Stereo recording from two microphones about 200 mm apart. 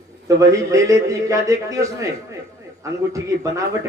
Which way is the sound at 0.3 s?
15° right (ahead or behind).